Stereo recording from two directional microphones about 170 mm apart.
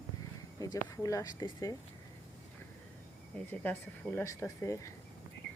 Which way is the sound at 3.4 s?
10° left (ahead or behind).